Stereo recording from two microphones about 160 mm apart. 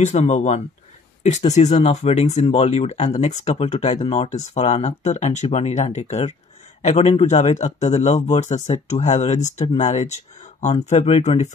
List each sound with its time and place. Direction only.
0.0 s a man's voice: 45° left (ahead or behind)